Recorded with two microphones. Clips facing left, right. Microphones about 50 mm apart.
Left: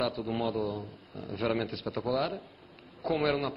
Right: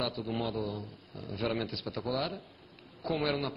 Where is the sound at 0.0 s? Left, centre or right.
Centre.